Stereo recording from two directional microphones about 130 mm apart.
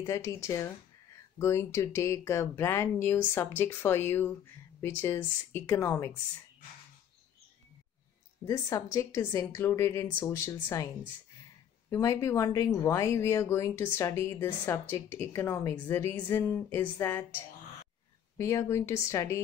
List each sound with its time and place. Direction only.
0.0 s speech: 25° left (ahead or behind)
8.5 s speech: 25° left (ahead or behind)
11.9 s speech: 25° left (ahead or behind)
18.4 s speech: 25° left (ahead or behind)